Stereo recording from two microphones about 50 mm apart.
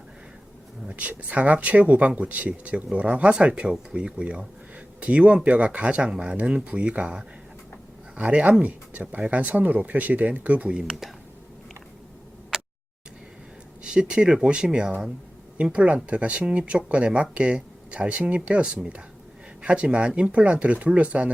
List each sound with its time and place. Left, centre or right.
0.9 s speech: right
10.7 s speech: centre
13.8 s speech: centre